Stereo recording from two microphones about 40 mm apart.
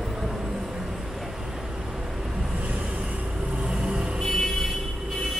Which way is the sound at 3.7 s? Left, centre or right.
Right.